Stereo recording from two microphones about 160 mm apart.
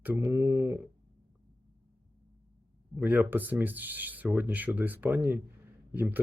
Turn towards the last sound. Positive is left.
turn(degrees=-15)  # may be behind; listen again after turning